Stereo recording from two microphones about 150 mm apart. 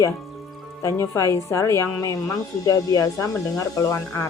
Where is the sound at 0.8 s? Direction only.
20° left (ahead or behind).